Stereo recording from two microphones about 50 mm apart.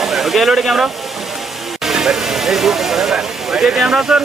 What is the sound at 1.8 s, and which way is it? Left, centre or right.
Speech, centre.